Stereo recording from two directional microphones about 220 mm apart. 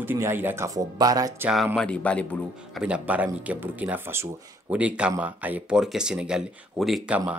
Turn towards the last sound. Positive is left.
turn(degrees=-5)  # may be behind; listen again after turning